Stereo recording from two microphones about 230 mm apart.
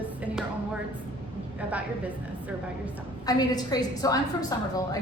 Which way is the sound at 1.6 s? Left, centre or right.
Centre.